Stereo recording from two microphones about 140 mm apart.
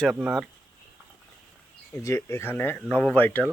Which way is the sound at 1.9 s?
20° left (ahead or behind).